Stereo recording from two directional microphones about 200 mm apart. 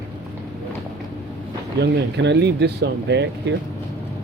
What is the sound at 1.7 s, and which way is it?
Speech, 60° right (ahead or behind).